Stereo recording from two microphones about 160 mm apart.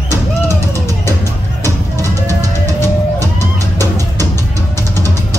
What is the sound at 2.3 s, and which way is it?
Music, 20° right (ahead or behind).